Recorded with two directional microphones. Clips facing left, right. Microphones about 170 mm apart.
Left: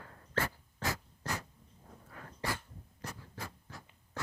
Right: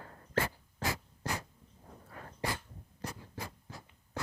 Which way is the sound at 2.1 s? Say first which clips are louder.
Right 2 dB; 30° right (ahead or behind).